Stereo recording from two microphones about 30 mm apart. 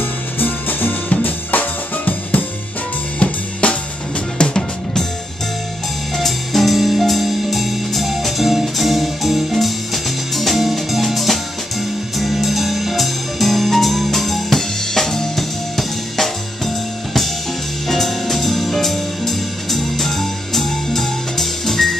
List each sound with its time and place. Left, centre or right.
0.4 s music: left
1.2 s drum kit: left
3.2 s drum kit: left
4.4 s music: left
6.1 s music: centre
15.8 s drum kit: centre
17.8 s music: centre